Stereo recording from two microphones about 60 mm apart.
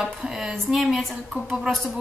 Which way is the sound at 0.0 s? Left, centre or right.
Centre.